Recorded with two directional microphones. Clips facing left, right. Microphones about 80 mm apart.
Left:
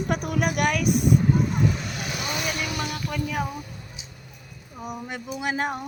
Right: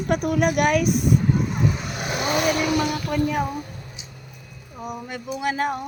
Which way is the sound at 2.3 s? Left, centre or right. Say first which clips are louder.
Right 10 dB; right.